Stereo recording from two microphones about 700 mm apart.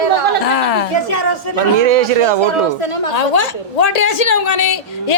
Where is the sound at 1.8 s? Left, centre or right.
Right.